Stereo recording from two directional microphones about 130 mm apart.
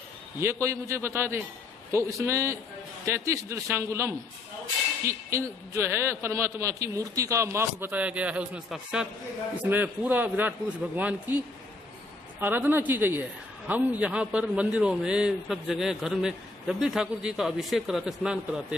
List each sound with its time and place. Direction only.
0.4 s a man's voice: 20° right (ahead or behind)
12.4 s a man's voice: 15° right (ahead or behind)